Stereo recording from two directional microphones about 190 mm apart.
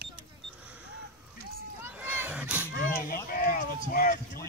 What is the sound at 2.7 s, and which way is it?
Speech, 50° left (ahead or behind).